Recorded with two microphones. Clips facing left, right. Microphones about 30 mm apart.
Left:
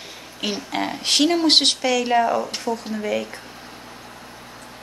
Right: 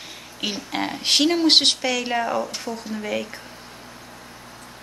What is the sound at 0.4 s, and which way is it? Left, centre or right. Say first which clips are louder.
Speech: left 1 dB; centre.